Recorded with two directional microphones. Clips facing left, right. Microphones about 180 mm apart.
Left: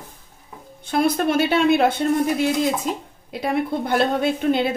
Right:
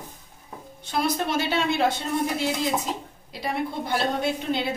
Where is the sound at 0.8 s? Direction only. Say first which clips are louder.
Left 6 dB; 55° left (ahead or behind).